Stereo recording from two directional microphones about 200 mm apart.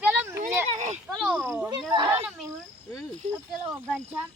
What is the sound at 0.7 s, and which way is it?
Speech, 35° right (ahead or behind).